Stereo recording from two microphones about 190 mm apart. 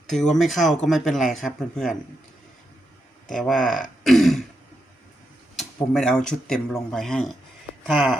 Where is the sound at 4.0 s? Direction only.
Centre (ahead or behind).